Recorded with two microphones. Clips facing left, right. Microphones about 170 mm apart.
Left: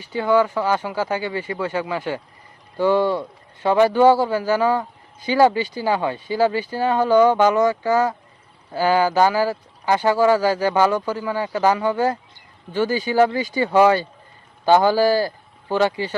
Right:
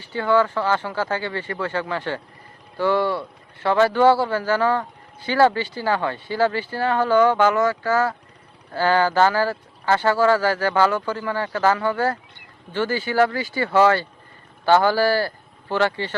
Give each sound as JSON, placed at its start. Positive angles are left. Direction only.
{"t": 0.0, "sound": "speech", "side_deg": 15}